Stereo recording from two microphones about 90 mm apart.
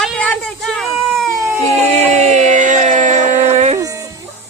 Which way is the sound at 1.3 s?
30° right (ahead or behind).